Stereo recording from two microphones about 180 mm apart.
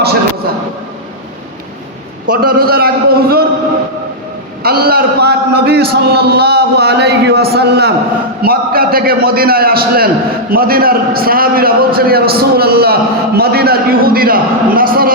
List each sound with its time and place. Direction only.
2.3 s a man's voice: 55° right (ahead or behind)
4.6 s a man's voice: 60° right (ahead or behind)